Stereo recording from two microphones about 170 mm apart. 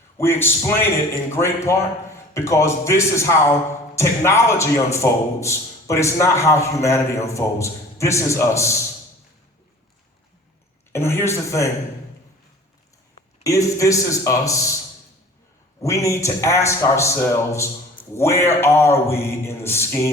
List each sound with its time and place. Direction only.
0.2 s a man's voice: 15° left (ahead or behind)
10.9 s a man's voice: 15° left (ahead or behind)
13.4 s speech: 20° left (ahead or behind)
15.8 s a man's voice: 20° left (ahead or behind)